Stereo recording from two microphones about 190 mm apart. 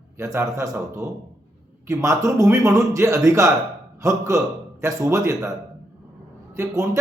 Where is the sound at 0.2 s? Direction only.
15° right (ahead or behind).